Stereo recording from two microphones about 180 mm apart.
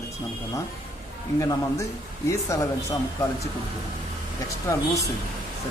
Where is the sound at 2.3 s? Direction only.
15° left (ahead or behind).